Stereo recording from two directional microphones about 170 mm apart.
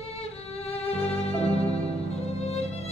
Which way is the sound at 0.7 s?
35° left (ahead or behind).